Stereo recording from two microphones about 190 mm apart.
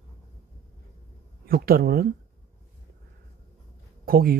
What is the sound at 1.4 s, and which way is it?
Speech, 50° right (ahead or behind).